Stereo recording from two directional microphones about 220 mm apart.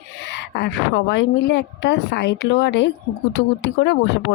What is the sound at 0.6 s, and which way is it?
Speech, 50° left (ahead or behind).